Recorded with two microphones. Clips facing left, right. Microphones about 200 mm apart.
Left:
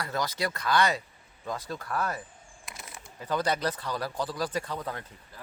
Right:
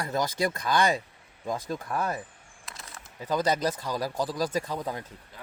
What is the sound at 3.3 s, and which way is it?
Speech, 15° right (ahead or behind).